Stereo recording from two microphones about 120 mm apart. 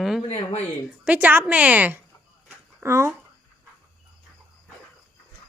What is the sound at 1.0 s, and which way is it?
A woman's voice, 15° right (ahead or behind).